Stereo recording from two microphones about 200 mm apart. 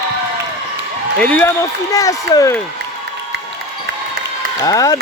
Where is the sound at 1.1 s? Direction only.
5° left (ahead or behind).